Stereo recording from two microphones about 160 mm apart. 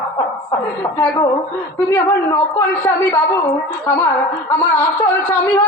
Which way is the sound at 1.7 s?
20° left (ahead or behind).